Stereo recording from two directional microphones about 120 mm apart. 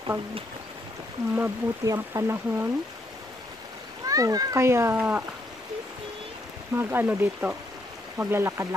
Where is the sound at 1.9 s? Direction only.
30° right (ahead or behind).